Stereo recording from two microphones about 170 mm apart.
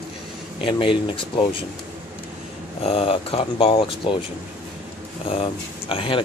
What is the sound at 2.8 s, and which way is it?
Speech, 35° left (ahead or behind).